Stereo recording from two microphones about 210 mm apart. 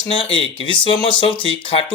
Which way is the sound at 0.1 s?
25° left (ahead or behind).